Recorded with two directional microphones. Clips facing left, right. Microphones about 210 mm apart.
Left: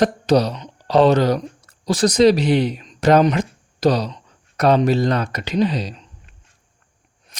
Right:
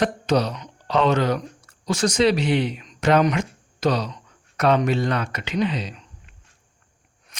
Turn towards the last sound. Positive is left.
turn(degrees=35)  # may be behind; listen again after turning